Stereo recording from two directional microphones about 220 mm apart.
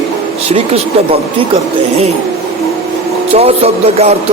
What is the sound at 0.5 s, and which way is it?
Speech, 25° right (ahead or behind).